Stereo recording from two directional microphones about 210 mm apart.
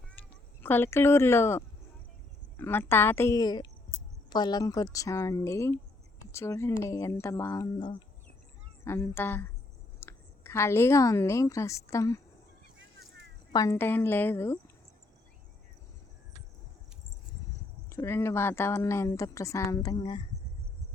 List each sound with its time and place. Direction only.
0.1 s a woman's voice: 10° left (ahead or behind)
13.5 s a woman's voice: 15° left (ahead or behind)
17.8 s a woman's voice: 15° left (ahead or behind)